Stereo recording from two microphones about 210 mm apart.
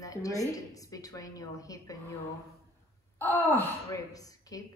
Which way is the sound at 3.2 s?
10° left (ahead or behind).